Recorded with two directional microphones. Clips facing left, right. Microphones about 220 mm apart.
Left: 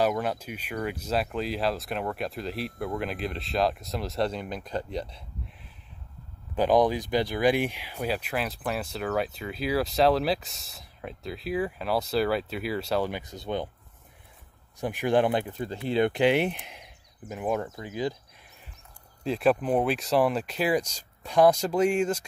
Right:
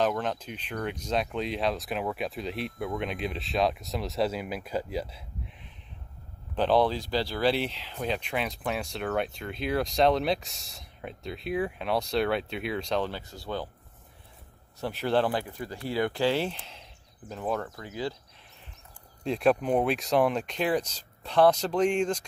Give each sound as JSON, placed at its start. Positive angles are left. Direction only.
{"t": 0.0, "sound": "speech", "side_deg": 10}
{"t": 6.5, "sound": "speech", "side_deg": 10}
{"t": 14.8, "sound": "speech", "side_deg": 15}
{"t": 19.2, "sound": "speech", "side_deg": 0}